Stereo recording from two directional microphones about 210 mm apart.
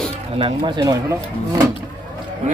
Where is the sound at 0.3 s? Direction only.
25° right (ahead or behind).